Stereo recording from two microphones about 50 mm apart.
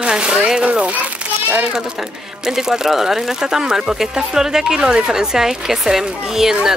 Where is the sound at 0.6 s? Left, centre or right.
Right.